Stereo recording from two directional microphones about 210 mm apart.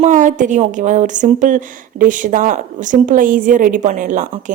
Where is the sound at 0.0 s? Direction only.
35° right (ahead or behind).